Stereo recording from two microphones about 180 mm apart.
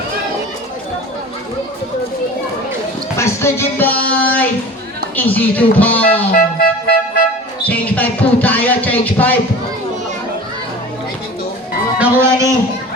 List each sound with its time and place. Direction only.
3.2 s speech: 15° left (ahead or behind)
6.3 s music: 55° left (ahead or behind)
7.6 s speech: 10° left (ahead or behind)
11.9 s speech: 15° right (ahead or behind)